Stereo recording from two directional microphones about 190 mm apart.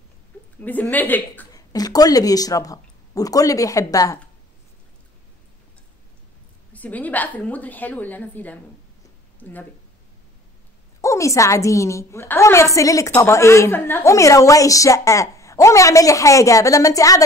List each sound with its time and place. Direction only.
0.6 s a woman's voice: 10° left (ahead or behind)
6.7 s a woman's voice: 10° left (ahead or behind)
11.0 s a woman's voice: 15° left (ahead or behind)